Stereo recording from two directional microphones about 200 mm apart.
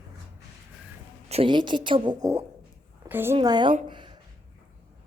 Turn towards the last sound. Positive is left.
turn(degrees=-25)  # may be behind; listen again after turning